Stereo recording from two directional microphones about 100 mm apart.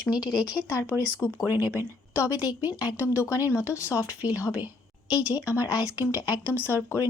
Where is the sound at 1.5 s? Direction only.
25° right (ahead or behind).